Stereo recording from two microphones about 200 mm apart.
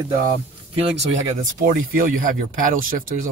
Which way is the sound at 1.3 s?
40° right (ahead or behind).